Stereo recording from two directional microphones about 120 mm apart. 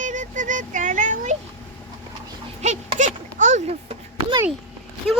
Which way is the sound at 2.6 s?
70° right (ahead or behind).